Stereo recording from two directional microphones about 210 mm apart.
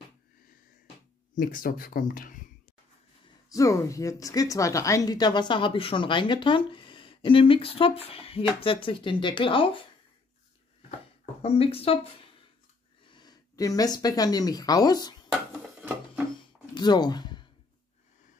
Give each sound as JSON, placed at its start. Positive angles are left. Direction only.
{"t": 1.3, "sound": "speech", "side_deg": 40}
{"t": 3.4, "sound": "speech", "side_deg": 15}
{"t": 11.4, "sound": "speech", "side_deg": 30}
{"t": 16.3, "sound": "a sound", "side_deg": 20}